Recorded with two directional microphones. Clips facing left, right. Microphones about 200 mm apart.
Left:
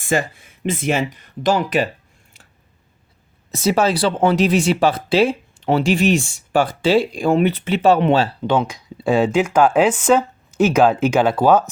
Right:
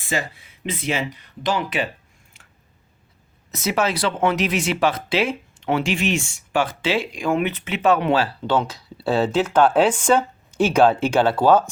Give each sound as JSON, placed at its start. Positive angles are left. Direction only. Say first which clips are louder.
{"t": 0.0, "sound": "speech", "louder": "left 6 dB", "side_deg": 50}
{"t": 3.5, "sound": "speech", "louder": "left 5 dB", "side_deg": 30}
{"t": 8.4, "sound": "speech", "louder": "left 3 dB", "side_deg": 15}